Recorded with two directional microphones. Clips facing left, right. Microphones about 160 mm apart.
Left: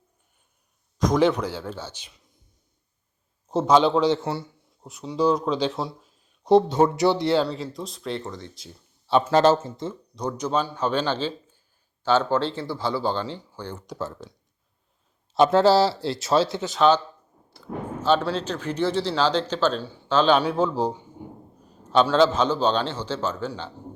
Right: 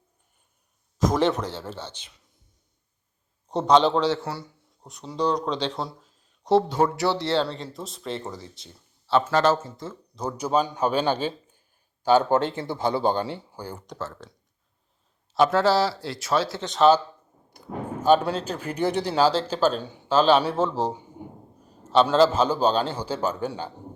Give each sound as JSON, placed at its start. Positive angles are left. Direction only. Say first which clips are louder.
{"t": 0.9, "sound": "speech", "louder": "left 2 dB", "side_deg": -5}
{"t": 3.5, "sound": "speech", "louder": "left 1 dB", "side_deg": 5}
{"t": 4.0, "sound": "speech", "louder": "left 3 dB", "side_deg": 20}
{"t": 4.8, "sound": "speech", "louder": "left 3 dB", "side_deg": 5}
{"t": 7.4, "sound": "speech", "louder": "left 3 dB", "side_deg": 0}
{"t": 9.0, "sound": "speech", "louder": "left 1 dB", "side_deg": 15}
{"t": 9.3, "sound": "speech", "louder": "left 3 dB", "side_deg": 30}
{"t": 10.2, "sound": "speech", "louder": "right 1 dB", "side_deg": -5}
{"t": 14.0, "sound": "speech", "louder": "left 3 dB", "side_deg": 15}
{"t": 15.4, "sound": "speech", "louder": "left 3 dB", "side_deg": 25}
{"t": 16.6, "sound": "speech", "louder": "right 1 dB", "side_deg": 0}
{"t": 17.5, "sound": "speech", "louder": "even", "side_deg": -15}
{"t": 22.0, "sound": "speech", "louder": "even", "side_deg": -5}